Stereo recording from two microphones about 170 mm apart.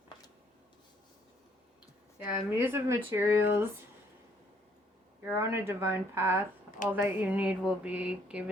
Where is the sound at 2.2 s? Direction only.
10° right (ahead or behind).